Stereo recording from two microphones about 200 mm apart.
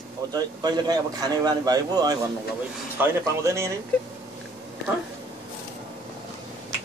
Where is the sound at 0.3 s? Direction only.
20° right (ahead or behind).